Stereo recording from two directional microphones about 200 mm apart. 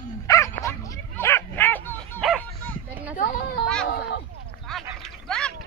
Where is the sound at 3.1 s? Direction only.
45° left (ahead or behind).